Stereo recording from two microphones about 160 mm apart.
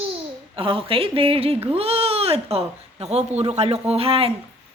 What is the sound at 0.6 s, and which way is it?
A woman's voice, 35° right (ahead or behind).